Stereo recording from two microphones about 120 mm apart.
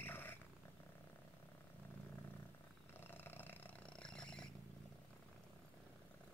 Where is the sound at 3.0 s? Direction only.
15° left (ahead or behind).